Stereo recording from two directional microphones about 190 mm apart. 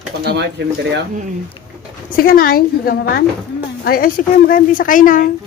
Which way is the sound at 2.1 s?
50° left (ahead or behind).